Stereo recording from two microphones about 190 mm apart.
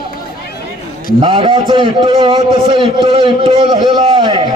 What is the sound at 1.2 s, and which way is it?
A man's voice, 25° right (ahead or behind).